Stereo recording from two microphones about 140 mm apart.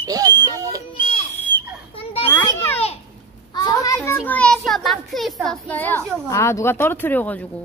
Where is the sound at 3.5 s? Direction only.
25° left (ahead or behind).